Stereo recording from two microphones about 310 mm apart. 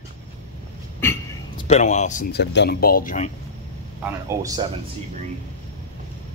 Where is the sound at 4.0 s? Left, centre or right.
Centre.